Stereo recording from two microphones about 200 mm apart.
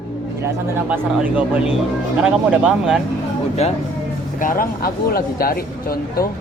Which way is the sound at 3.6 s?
30° left (ahead or behind).